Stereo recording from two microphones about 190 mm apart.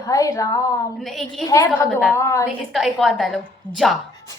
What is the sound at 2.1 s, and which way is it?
Speech, 15° left (ahead or behind).